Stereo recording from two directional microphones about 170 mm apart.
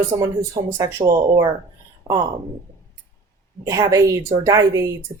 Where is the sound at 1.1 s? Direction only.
25° right (ahead or behind).